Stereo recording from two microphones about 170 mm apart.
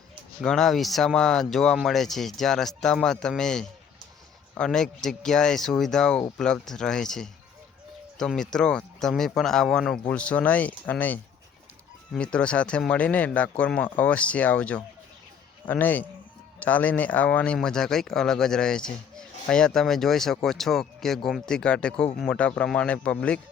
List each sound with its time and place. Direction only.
0.4 s speech: 5° left (ahead or behind)